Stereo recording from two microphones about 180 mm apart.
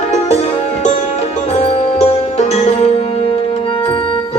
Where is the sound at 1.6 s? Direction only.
35° left (ahead or behind).